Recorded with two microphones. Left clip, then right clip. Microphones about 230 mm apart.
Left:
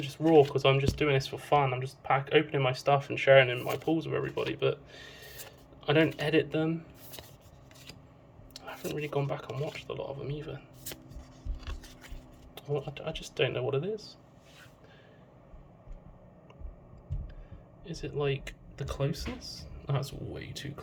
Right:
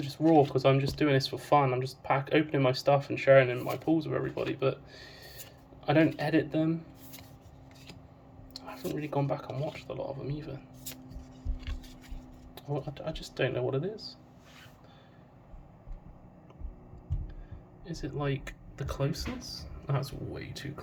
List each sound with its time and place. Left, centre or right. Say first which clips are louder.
0.0 s speech: left 1 dB; centre
8.5 s speech: even; centre
11.6 s a sound: left 2 dB; left
12.7 s speech: left 2 dB; centre
17.8 s speech: left 3 dB; centre